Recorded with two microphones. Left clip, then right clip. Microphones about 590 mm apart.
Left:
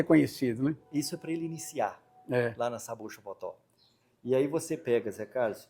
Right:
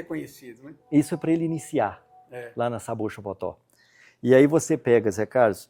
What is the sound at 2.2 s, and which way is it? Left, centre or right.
Speech, left.